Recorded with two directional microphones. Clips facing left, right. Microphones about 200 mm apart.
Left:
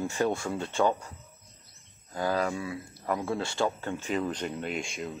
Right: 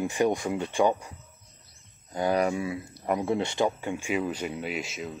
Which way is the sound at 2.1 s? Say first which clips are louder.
Right 4 dB; 20° right (ahead or behind).